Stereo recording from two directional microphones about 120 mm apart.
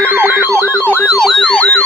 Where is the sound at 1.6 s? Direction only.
15° left (ahead or behind).